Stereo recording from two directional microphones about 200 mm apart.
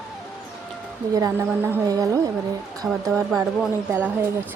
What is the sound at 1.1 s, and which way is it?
A woman's voice, 15° right (ahead or behind).